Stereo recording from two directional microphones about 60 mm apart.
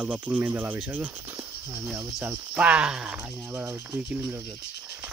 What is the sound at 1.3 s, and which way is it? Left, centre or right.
Cricket, right.